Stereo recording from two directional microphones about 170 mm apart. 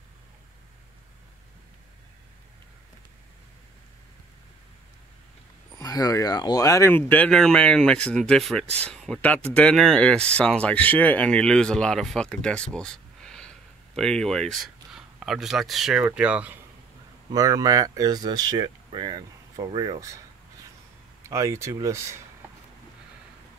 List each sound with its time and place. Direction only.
5.8 s speech: 20° left (ahead or behind); by 16.5 s 5° right (ahead or behind)
17.3 s speech: 20° right (ahead or behind)
21.2 s speech: 15° right (ahead or behind)